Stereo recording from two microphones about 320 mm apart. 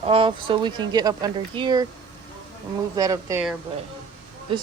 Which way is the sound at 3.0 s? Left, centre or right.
Centre.